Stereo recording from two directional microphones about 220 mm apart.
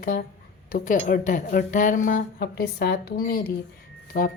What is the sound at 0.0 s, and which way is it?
A woman's voice, 40° left (ahead or behind).